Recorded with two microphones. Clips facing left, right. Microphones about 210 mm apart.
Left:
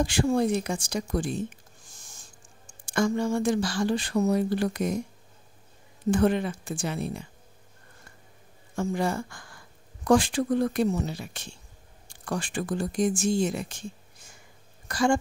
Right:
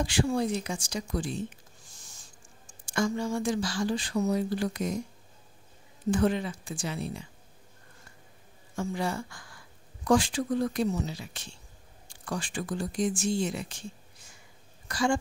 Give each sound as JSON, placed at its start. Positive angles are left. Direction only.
{"t": 0.0, "sound": "speech", "side_deg": 45}
{"t": 6.0, "sound": "speech", "side_deg": 55}
{"t": 8.7, "sound": "speech", "side_deg": 50}